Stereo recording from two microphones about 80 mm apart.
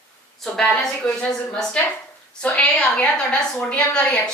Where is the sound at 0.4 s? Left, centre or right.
Centre.